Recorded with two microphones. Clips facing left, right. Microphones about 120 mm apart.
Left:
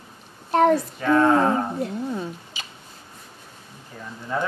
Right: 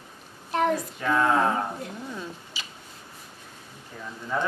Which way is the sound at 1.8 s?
30° left (ahead or behind).